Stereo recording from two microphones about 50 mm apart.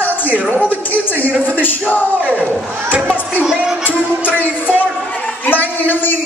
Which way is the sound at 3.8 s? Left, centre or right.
Left.